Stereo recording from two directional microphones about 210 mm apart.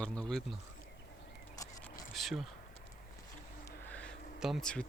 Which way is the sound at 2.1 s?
Centre (ahead or behind).